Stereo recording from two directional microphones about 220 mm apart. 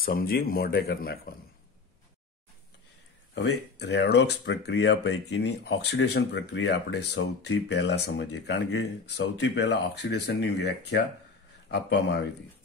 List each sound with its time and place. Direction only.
0.0 s speech: 40° left (ahead or behind)
3.8 s speech: 50° left (ahead or behind)